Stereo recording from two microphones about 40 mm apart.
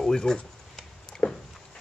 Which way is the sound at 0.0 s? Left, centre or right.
Centre.